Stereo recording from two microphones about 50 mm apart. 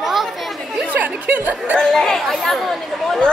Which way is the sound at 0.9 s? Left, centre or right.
Right.